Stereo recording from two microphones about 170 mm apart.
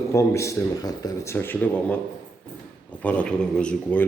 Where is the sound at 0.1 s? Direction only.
15° left (ahead or behind).